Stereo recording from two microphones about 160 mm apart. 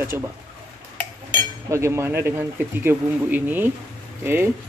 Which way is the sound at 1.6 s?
15° right (ahead or behind).